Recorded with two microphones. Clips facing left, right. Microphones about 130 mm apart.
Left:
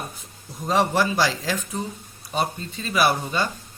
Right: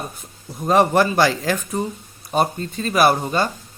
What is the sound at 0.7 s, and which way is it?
A man's voice, 55° right (ahead or behind).